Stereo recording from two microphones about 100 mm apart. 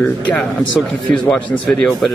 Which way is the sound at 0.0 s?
15° left (ahead or behind).